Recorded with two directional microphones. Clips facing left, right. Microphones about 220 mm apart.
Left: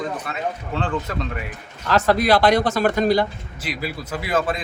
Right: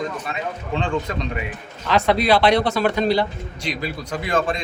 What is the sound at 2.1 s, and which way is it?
Speech, 45° left (ahead or behind).